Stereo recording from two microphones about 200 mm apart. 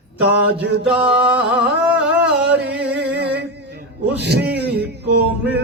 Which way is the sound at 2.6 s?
55° right (ahead or behind).